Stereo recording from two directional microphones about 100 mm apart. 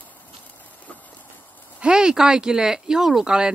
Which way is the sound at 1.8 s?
10° right (ahead or behind).